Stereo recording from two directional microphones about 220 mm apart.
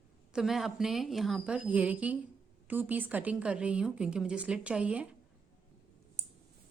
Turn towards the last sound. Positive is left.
turn(degrees=-5)  # may be behind; listen again after turning